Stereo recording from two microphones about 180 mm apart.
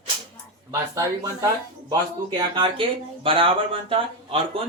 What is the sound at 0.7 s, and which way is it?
Speech, 15° right (ahead or behind).